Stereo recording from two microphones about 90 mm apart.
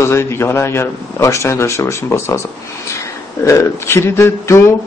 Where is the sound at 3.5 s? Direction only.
30° left (ahead or behind).